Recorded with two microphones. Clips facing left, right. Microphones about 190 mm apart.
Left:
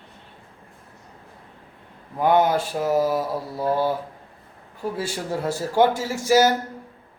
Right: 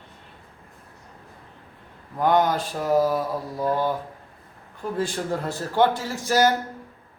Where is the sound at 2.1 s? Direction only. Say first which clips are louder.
Left 2 dB; 10° left (ahead or behind).